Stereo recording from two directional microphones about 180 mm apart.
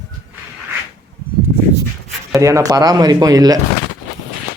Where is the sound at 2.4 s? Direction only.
15° right (ahead or behind).